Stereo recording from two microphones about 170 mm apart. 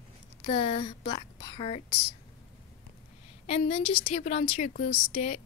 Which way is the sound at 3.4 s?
35° left (ahead or behind).